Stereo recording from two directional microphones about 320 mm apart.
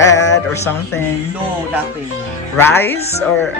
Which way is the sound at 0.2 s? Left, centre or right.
Left.